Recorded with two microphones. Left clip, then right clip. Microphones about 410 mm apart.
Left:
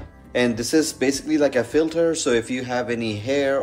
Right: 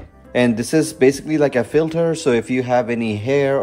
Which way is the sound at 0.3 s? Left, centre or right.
Centre.